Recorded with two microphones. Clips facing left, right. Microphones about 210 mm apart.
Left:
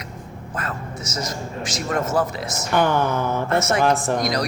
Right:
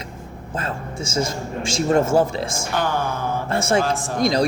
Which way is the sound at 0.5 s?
30° right (ahead or behind).